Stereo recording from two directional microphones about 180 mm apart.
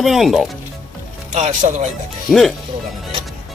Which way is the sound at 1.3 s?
40° right (ahead or behind).